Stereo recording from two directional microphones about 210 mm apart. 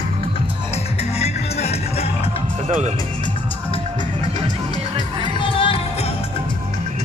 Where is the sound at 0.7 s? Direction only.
30° left (ahead or behind).